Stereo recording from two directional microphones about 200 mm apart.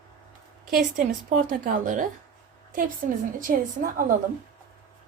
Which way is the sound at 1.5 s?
40° right (ahead or behind).